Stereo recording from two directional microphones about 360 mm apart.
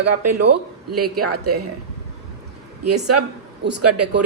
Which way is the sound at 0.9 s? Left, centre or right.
Right.